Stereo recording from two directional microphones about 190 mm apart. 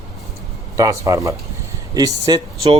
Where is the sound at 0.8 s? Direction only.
15° right (ahead or behind).